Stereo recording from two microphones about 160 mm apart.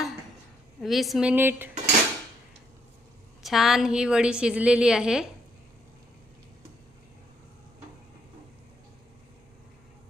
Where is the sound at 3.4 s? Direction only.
Centre (ahead or behind).